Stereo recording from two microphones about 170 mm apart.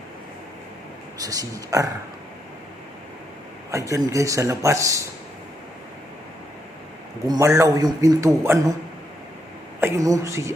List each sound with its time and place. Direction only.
1.2 s a man's voice: 20° right (ahead or behind)
3.7 s a man's voice: 20° right (ahead or behind)
7.3 s a man's voice: 20° right (ahead or behind)
9.8 s a man's voice: 20° right (ahead or behind)